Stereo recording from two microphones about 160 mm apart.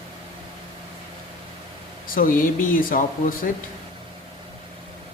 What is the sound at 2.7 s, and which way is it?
Speech, 55° left (ahead or behind).